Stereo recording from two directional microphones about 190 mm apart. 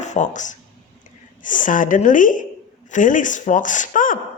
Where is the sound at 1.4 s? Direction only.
45° left (ahead or behind).